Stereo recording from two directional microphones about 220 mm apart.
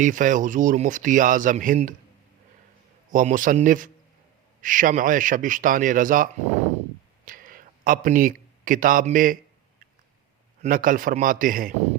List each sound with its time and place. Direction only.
0.0 s speech: 35° right (ahead or behind)
3.1 s speech: 35° right (ahead or behind)
7.3 s speech: 40° right (ahead or behind)
10.6 s speech: 40° right (ahead or behind)